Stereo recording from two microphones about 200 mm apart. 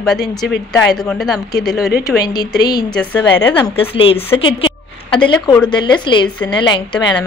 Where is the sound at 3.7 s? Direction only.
30° left (ahead or behind).